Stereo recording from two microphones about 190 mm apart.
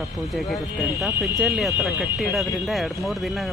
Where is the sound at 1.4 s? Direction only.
Centre (ahead or behind).